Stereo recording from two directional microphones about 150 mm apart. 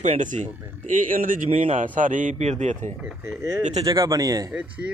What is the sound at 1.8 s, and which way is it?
A man's voice, 60° right (ahead or behind).